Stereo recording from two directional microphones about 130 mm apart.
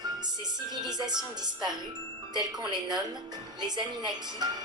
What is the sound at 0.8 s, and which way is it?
Speech, 35° right (ahead or behind).